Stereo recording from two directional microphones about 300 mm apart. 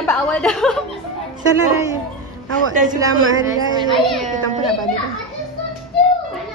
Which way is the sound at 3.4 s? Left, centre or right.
Centre.